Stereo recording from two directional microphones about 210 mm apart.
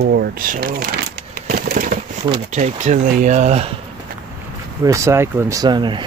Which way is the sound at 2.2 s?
30° right (ahead or behind).